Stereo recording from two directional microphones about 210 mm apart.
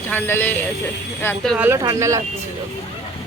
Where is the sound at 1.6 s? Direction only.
15° right (ahead or behind).